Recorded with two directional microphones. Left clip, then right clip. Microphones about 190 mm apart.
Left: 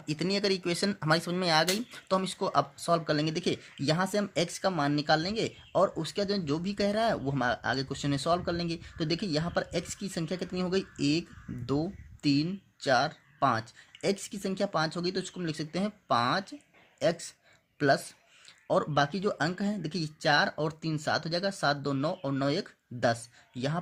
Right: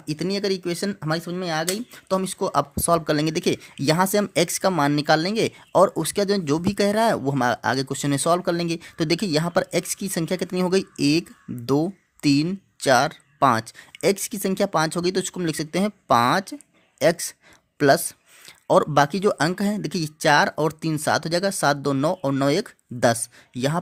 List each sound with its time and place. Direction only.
0.0 s speech: 30° right (ahead or behind)